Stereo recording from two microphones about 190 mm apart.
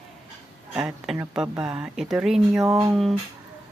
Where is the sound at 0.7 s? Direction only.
5° right (ahead or behind).